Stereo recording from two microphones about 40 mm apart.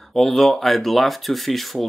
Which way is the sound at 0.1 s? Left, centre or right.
Centre.